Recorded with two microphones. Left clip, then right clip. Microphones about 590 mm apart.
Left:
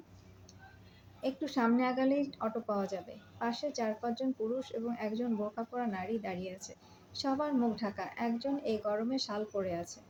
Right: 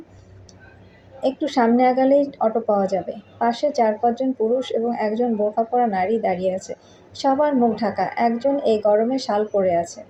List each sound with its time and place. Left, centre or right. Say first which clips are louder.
1.2 s speech: right 14 dB; left